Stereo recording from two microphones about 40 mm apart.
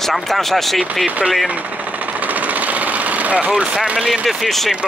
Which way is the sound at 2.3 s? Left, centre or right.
Right.